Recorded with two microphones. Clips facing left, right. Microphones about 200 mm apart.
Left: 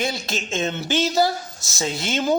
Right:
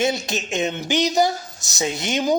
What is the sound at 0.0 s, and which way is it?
Speech, 20° right (ahead or behind).